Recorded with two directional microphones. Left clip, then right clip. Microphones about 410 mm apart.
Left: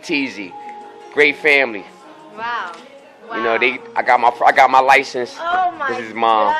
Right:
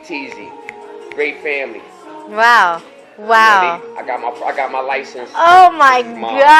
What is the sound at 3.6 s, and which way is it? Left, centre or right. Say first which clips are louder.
A man's voice: left 2 dB; left.